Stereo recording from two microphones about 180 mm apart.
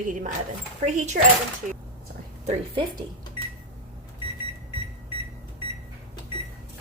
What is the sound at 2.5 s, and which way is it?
Speech, 30° right (ahead or behind).